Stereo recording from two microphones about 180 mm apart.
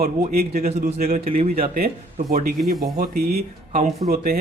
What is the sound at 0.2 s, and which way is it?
A man's voice, 55° right (ahead or behind).